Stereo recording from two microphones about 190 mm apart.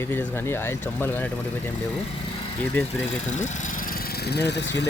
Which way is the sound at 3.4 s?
45° left (ahead or behind).